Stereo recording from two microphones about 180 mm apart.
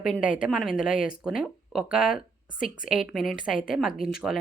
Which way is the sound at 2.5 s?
50° left (ahead or behind).